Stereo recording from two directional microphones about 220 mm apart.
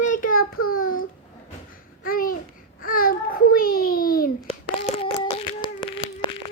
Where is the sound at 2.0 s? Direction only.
40° left (ahead or behind).